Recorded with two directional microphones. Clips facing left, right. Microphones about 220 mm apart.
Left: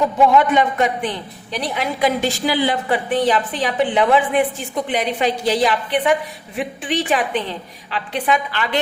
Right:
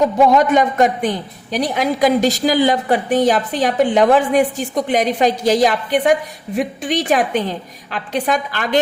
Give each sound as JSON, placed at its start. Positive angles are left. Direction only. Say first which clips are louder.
{"t": 0.3, "sound": "a woman's voice", "louder": "right 2 dB", "side_deg": -40}